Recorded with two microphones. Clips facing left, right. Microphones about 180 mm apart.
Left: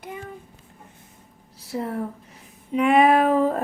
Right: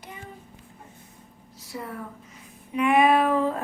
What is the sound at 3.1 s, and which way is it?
Speech, 45° left (ahead or behind).